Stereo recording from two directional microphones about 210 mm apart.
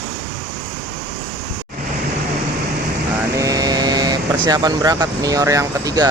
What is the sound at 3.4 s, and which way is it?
Speech, 15° right (ahead or behind).